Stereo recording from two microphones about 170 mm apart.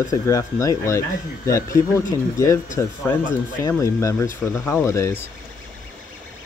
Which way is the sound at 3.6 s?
15° left (ahead or behind).